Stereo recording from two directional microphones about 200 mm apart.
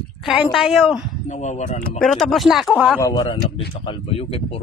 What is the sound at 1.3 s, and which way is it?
Speech, 35° left (ahead or behind).